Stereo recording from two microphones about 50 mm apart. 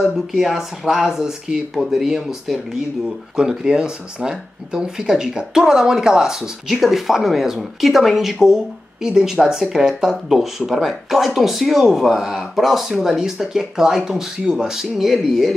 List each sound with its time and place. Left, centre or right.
0.3 s speech: centre
6.7 s speech: centre